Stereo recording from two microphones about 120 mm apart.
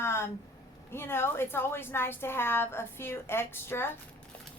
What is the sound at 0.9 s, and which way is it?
A woman's voice, 20° left (ahead or behind).